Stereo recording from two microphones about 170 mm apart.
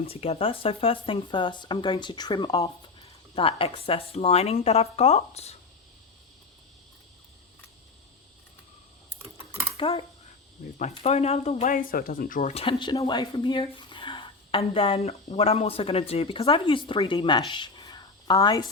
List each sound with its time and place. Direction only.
0.1 s speech: 35° left (ahead or behind)
9.7 s speech: 30° left (ahead or behind)
10.6 s speech: 45° left (ahead or behind)
11.7 s speech: 55° left (ahead or behind); by 18.6 s 20° left (ahead or behind)